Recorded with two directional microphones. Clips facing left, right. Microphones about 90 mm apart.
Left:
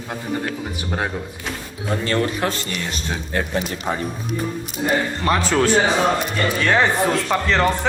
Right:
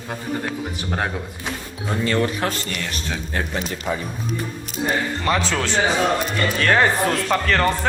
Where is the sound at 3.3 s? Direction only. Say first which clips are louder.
Left 4 dB; 40° left (ahead or behind).